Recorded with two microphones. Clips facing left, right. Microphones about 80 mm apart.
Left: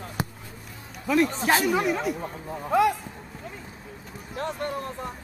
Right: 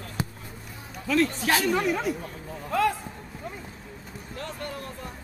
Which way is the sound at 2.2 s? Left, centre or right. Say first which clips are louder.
Left 4 dB; left.